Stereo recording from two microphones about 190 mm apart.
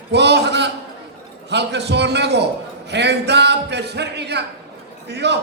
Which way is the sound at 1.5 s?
65° right (ahead or behind).